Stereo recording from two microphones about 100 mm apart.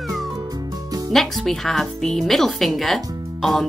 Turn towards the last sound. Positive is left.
turn(degrees=0)  # may be behind; listen again after turning